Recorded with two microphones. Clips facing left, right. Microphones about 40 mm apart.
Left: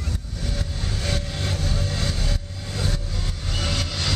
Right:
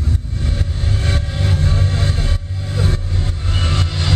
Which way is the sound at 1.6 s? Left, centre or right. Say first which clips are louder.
Right 6 dB; right.